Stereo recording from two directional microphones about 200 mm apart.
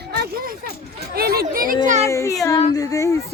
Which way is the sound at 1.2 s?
50° right (ahead or behind).